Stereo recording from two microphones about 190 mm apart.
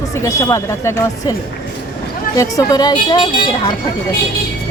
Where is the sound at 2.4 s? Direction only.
20° left (ahead or behind).